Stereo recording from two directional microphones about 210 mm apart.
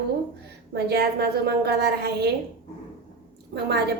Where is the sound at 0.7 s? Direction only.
50° right (ahead or behind).